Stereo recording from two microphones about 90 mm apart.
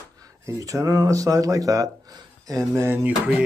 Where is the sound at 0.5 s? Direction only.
40° right (ahead or behind).